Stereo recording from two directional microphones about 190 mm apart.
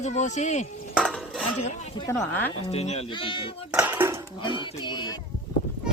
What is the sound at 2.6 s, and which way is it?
Speech, 35° left (ahead or behind).